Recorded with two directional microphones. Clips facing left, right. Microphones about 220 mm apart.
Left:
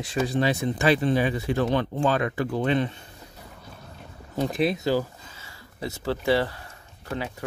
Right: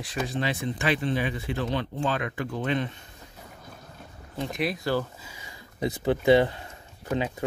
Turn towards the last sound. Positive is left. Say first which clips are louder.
# right 4 dB
turn(degrees=-20)  # may be behind; listen again after turning